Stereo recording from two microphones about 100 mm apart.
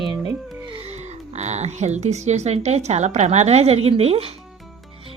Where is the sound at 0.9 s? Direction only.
90° right.